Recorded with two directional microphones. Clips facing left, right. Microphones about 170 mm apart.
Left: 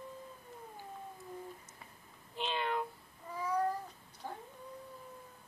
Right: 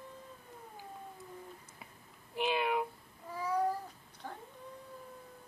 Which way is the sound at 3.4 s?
10° right (ahead or behind).